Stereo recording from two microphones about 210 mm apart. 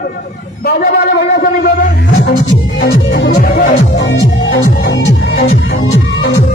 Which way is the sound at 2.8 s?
55° left (ahead or behind).